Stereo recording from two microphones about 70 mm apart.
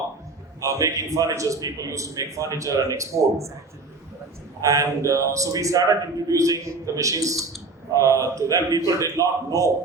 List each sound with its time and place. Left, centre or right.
0.6 s a man's voice: right
4.6 s a man's voice: right